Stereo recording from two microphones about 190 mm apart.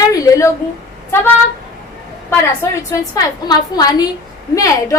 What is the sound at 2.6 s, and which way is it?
A woman's voice, 15° left (ahead or behind).